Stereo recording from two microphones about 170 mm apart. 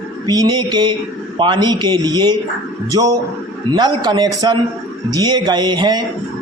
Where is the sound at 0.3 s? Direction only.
25° right (ahead or behind).